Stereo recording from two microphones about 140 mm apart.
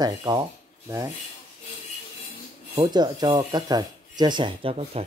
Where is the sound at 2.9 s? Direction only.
30° right (ahead or behind).